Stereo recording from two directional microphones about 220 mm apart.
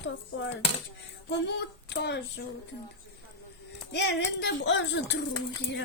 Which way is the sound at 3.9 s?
50° left (ahead or behind).